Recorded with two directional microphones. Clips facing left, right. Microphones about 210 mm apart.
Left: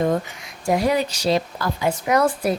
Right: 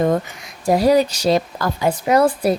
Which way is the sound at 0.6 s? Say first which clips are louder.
Right 5 dB; 35° right (ahead or behind).